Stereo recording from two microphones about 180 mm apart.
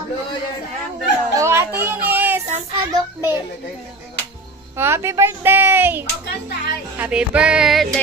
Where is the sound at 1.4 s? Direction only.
15° right (ahead or behind).